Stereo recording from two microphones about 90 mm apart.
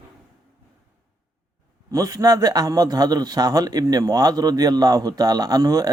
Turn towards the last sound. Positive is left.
turn(degrees=-45)  # may be behind; listen again after turning